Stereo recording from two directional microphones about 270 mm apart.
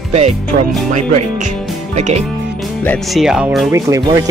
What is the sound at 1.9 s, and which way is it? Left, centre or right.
Speech, right.